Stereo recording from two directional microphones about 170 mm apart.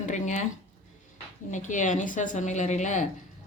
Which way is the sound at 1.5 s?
45° left (ahead or behind).